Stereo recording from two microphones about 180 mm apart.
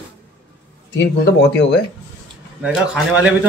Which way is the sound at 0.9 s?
70° left (ahead or behind).